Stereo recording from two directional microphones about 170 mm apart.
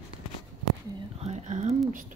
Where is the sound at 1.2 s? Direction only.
45° right (ahead or behind).